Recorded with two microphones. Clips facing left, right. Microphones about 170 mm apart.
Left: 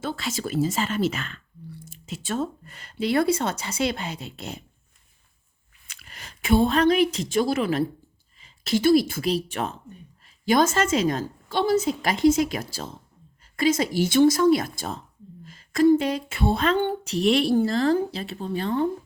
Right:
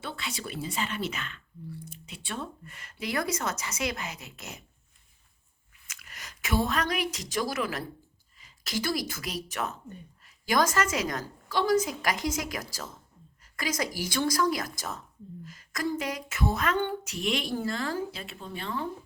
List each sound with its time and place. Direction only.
0.0 s speech: 45° left (ahead or behind)
5.9 s a woman's voice: 30° left (ahead or behind)